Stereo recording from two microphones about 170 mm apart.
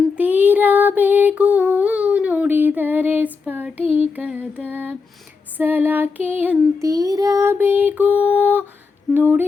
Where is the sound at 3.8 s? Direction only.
35° left (ahead or behind).